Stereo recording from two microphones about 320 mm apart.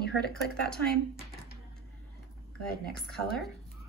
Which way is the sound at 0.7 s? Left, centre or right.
Centre.